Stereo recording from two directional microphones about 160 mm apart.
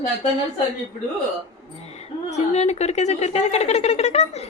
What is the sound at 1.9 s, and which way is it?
A woman's voice, 40° left (ahead or behind).